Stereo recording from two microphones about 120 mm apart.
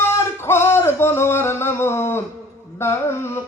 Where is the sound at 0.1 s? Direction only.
20° left (ahead or behind).